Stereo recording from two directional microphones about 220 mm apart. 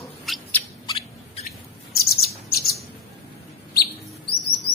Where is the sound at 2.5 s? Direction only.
45° left (ahead or behind).